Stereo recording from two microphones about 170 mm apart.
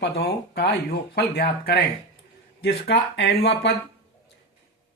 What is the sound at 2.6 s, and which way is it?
Speech, 85° left.